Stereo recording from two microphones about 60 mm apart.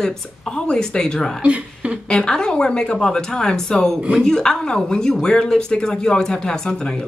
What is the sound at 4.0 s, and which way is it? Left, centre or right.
Speech, centre.